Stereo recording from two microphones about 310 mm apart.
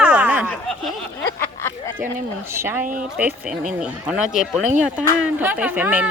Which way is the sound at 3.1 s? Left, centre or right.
Centre.